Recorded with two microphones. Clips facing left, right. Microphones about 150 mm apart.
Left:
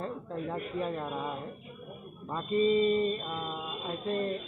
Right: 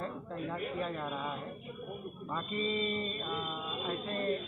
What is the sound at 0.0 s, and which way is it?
Speech, 20° left (ahead or behind).